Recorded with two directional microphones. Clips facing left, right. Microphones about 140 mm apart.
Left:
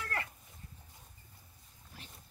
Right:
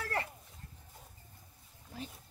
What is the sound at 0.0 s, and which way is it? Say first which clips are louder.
Livestock: right 3 dB; 30° right (ahead or behind).